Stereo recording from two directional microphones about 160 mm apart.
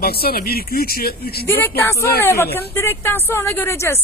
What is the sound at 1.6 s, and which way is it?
A woman's voice, 15° left (ahead or behind).